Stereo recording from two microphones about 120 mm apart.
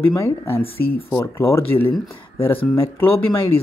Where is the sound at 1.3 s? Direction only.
20° left (ahead or behind).